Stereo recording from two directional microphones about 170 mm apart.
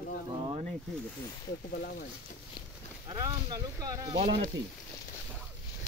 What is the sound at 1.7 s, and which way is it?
Speech, 60° left (ahead or behind).